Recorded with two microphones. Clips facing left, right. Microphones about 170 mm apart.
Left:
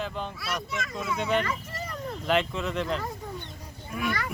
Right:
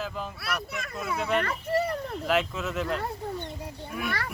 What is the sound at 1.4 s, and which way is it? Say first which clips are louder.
Children playing: right 6 dB; 60° right (ahead or behind).